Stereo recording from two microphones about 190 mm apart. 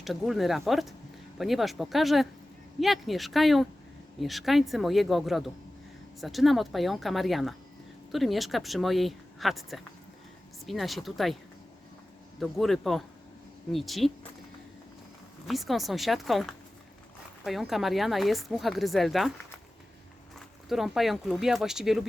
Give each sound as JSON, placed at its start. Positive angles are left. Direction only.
{"t": 0.0, "sound": "speech", "side_deg": 0}
{"t": 12.4, "sound": "speech", "side_deg": 0}
{"t": 15.4, "sound": "speech", "side_deg": 0}
{"t": 20.7, "sound": "speech", "side_deg": 0}